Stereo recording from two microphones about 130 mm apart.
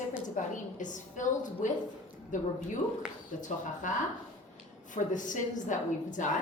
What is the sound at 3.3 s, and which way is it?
Speech, 90° left.